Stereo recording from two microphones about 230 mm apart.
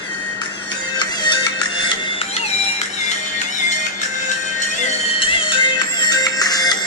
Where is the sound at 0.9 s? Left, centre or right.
Centre.